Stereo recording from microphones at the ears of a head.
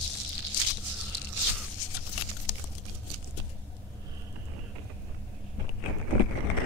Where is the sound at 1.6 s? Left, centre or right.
Left.